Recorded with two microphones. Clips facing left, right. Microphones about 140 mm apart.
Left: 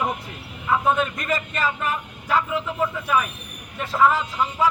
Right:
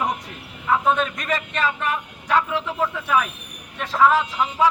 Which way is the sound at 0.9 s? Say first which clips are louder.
Even; 5° left (ahead or behind).